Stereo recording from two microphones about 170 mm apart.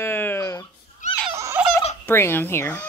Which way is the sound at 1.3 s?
15° right (ahead or behind).